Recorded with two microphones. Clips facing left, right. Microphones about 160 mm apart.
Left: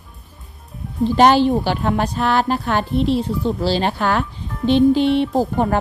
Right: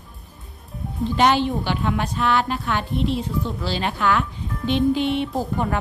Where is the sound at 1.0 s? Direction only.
35° left (ahead or behind).